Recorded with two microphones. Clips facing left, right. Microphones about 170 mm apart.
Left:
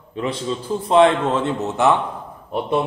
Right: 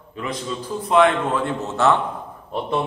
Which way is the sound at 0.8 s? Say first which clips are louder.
Left 2 dB; 30° left (ahead or behind).